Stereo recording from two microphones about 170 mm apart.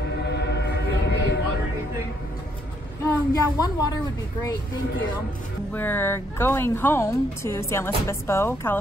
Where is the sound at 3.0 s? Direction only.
20° left (ahead or behind).